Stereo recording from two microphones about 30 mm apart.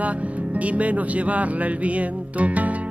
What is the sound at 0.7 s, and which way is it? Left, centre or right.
Speech, right.